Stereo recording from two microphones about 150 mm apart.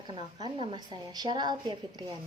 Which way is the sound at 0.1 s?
30° right (ahead or behind).